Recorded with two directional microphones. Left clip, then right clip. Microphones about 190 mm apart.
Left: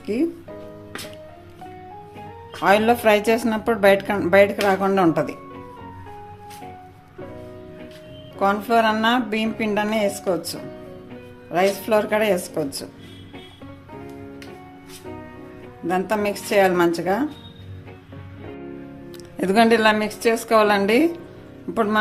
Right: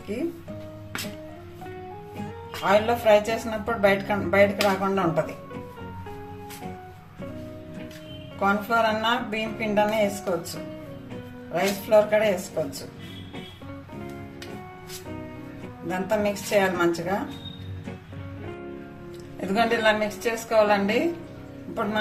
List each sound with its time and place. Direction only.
2.1 s music: centre (ahead or behind)
2.6 s speech: 60° left (ahead or behind)
8.4 s speech: 60° left (ahead or behind)
11.5 s speech: 60° left (ahead or behind)
15.9 s speech: 60° left (ahead or behind)
19.4 s speech: 65° left (ahead or behind)